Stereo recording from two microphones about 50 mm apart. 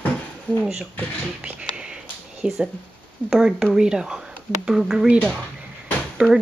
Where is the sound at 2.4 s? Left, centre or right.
Centre.